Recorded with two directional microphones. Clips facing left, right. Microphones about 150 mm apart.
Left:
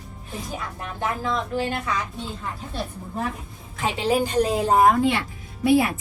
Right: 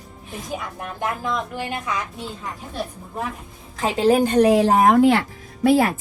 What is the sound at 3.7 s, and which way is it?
Speech, 40° right (ahead or behind).